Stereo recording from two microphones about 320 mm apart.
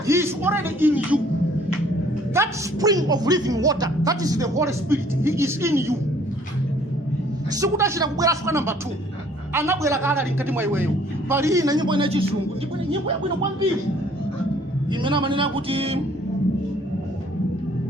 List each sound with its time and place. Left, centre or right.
0.1 s speech: centre
2.3 s speech: centre
7.5 s speech: centre
15.0 s speech: centre